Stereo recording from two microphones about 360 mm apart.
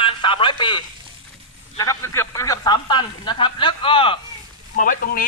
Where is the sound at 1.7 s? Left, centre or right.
Centre.